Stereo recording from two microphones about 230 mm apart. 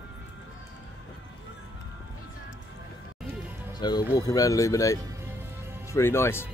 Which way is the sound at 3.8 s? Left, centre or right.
Centre.